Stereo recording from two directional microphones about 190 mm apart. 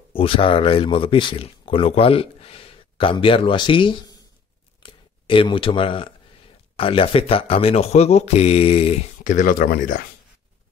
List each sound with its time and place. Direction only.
0.1 s speech: 30° left (ahead or behind)
4.8 s a sound: 25° left (ahead or behind)
6.8 s speech: 30° left (ahead or behind); by 10.0 s 50° left (ahead or behind)